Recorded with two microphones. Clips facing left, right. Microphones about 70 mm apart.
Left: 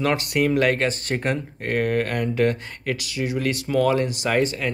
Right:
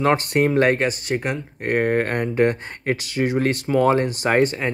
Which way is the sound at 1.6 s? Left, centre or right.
Right.